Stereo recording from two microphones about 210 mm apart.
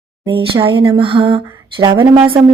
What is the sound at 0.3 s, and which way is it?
Speech, 25° right (ahead or behind).